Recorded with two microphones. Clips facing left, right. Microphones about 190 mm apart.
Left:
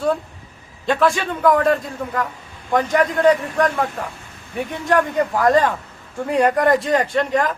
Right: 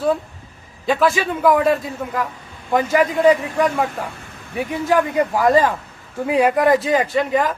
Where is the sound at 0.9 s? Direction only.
Centre (ahead or behind).